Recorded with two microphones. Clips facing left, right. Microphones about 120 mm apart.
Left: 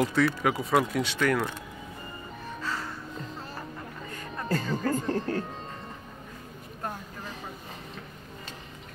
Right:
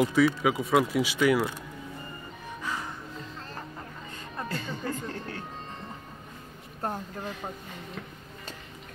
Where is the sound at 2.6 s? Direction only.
15° right (ahead or behind).